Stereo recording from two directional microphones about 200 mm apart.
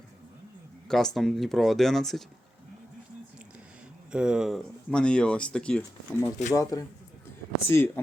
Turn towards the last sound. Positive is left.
turn(degrees=10)  # may be behind; listen again after turning